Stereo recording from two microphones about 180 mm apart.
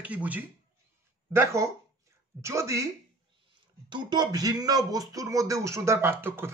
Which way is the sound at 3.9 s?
25° right (ahead or behind).